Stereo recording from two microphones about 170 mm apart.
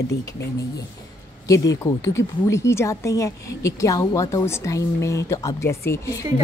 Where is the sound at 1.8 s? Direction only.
15° left (ahead or behind).